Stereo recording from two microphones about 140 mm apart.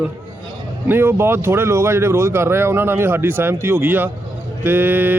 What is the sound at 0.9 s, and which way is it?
A man's voice, 15° right (ahead or behind).